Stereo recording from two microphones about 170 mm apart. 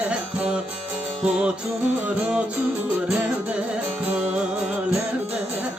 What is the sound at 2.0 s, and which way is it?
Music, 10° right (ahead or behind).